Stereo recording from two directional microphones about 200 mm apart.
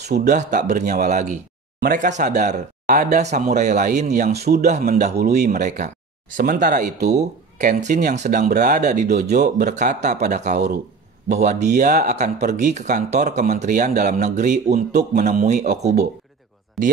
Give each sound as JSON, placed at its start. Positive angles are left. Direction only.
{"t": 0.0, "sound": "speech", "side_deg": -55}
{"t": 0.4, "sound": "speech", "side_deg": -40}
{"t": 4.4, "sound": "speech", "side_deg": -50}
{"t": 14.9, "sound": "speech", "side_deg": -55}
{"t": 15.2, "sound": "speech", "side_deg": -35}
{"t": 16.8, "sound": "speech", "side_deg": 0}